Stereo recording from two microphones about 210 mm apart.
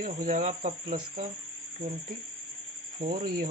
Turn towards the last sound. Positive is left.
turn(degrees=-45)  # may be behind; listen again after turning